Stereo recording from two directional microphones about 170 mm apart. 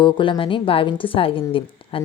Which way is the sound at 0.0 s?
30° left (ahead or behind).